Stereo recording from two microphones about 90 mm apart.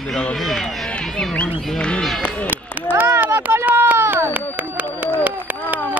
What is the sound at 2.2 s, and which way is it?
Speech, 15° left (ahead or behind).